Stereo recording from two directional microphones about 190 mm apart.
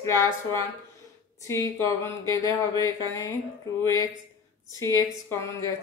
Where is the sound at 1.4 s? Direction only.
15° left (ahead or behind).